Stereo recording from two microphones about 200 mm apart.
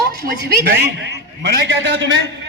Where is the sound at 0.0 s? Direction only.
50° right (ahead or behind).